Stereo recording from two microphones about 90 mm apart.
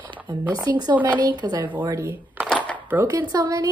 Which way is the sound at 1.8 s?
35° right (ahead or behind).